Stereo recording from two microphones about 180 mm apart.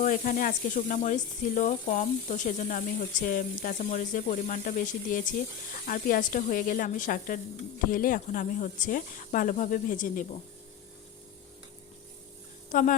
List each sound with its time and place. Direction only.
0.0 s speech: 50° left (ahead or behind)
12.7 s speech: 45° left (ahead or behind)